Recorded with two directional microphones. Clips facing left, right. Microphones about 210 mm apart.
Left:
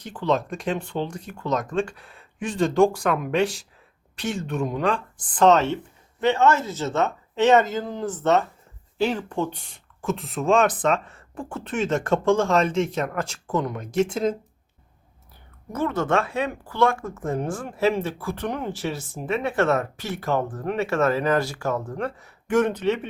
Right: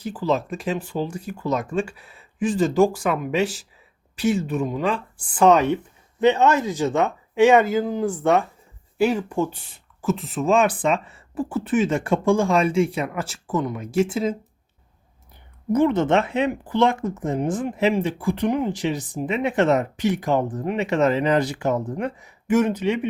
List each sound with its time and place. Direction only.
0.0 s speech: 5° right (ahead or behind)
15.7 s speech: 20° right (ahead or behind)